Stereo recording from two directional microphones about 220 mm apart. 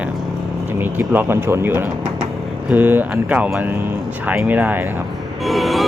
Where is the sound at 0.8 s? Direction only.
10° right (ahead or behind).